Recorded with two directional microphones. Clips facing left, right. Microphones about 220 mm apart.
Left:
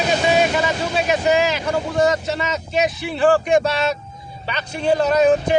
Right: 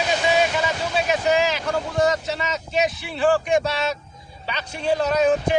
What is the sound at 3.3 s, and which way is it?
Speech, 50° left (ahead or behind).